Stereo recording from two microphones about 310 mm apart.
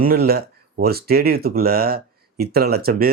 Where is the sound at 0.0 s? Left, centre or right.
Right.